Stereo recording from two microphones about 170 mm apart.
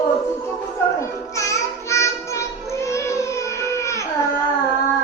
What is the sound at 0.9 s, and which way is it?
Child singing, 20° left (ahead or behind).